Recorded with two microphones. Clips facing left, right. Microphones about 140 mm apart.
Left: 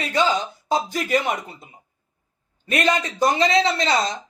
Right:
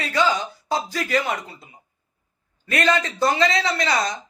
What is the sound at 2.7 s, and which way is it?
Speech, 20° left (ahead or behind).